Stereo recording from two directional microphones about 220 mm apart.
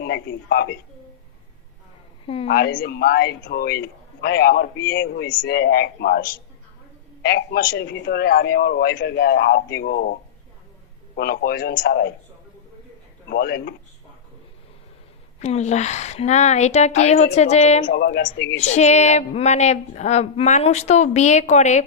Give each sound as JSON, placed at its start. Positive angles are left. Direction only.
{"t": 0.0, "sound": "a man's voice", "side_deg": 50}
{"t": 2.2, "sound": "a woman's voice", "side_deg": 25}
{"t": 2.5, "sound": "a man's voice", "side_deg": 45}
{"t": 13.3, "sound": "a man's voice", "side_deg": 45}
{"t": 15.4, "sound": "a woman's voice", "side_deg": 30}
{"t": 17.8, "sound": "a man's voice", "side_deg": 50}
{"t": 18.6, "sound": "a woman's voice", "side_deg": 30}